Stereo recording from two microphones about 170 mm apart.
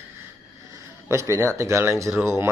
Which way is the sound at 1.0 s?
15° right (ahead or behind).